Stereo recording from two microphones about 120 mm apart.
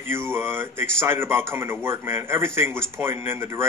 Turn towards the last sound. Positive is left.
turn(degrees=-20)  # may be behind; listen again after turning